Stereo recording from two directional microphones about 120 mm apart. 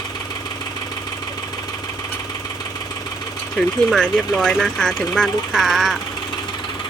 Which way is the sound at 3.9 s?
5° left (ahead or behind).